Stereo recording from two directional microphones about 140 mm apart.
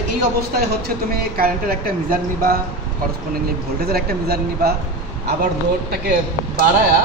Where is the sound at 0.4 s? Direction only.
90° right.